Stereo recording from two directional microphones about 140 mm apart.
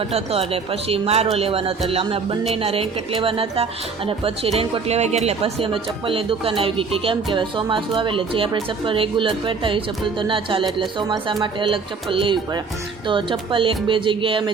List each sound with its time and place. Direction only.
0.1 s speech: 45° right (ahead or behind)